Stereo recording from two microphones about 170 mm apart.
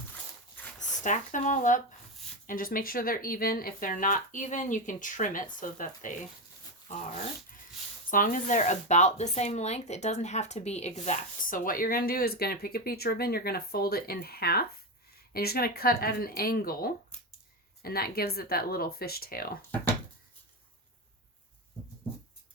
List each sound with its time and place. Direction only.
0.8 s speech: 50° left (ahead or behind)
8.1 s speech: 50° left (ahead or behind)